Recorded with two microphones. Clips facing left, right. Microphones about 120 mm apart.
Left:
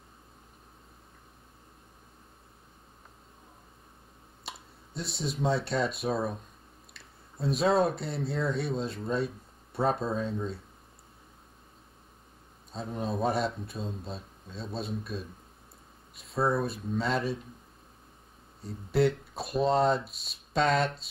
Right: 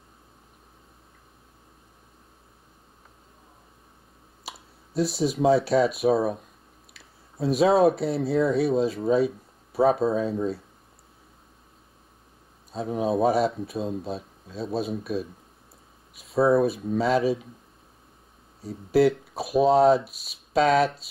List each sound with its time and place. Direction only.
4.5 s a sound: centre (ahead or behind)
5.5 s speech: 5° right (ahead or behind)
6.0 s speech: 60° right (ahead or behind)
6.9 s speech: centre (ahead or behind)
12.7 s speech: 5° right (ahead or behind)
18.6 s speech: centre (ahead or behind)